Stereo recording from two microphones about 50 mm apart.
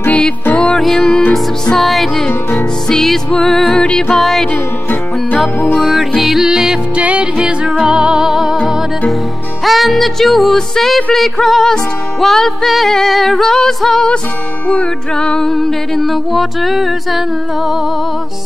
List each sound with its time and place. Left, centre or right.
0.1 s music: left
0.7 s music: centre
4.2 s music: centre
5.8 s music: centre
7.0 s music: right
7.3 s music: centre
9.7 s music: centre
14.7 s music: left; by 17.2 s centre